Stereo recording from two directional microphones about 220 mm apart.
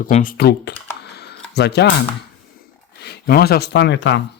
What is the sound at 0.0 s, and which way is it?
Speech, 40° left (ahead or behind).